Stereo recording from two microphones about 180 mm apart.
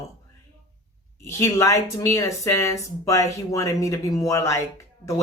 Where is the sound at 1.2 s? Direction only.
15° left (ahead or behind).